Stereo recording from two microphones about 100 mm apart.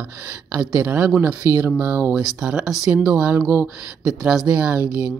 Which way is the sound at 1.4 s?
25° right (ahead or behind).